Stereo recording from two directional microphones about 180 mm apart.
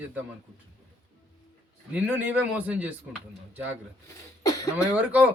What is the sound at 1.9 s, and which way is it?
Speech, 10° right (ahead or behind).